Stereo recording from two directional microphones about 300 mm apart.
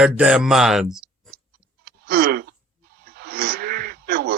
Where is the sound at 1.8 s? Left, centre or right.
Right.